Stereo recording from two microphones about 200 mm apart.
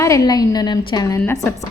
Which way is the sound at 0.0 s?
15° left (ahead or behind).